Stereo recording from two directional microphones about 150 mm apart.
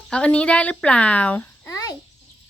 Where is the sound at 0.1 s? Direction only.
5° left (ahead or behind).